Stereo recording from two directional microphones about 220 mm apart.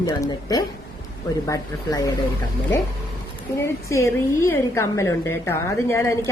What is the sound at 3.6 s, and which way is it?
A woman's voice, 15° left (ahead or behind).